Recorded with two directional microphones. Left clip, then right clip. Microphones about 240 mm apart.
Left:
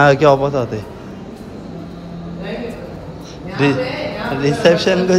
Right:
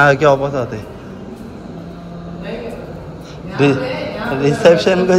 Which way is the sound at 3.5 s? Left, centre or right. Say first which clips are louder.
Right 2 dB; centre.